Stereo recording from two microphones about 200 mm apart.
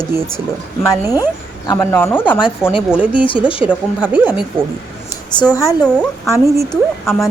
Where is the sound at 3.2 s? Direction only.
25° left (ahead or behind).